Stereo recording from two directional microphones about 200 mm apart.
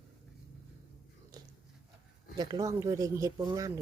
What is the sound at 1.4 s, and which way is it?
Biting, 20° right (ahead or behind).